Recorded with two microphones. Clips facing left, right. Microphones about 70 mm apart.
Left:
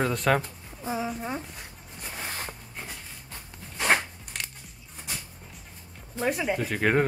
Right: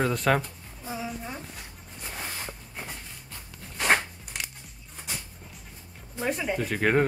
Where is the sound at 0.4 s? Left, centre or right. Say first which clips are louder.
Left 1 dB; left.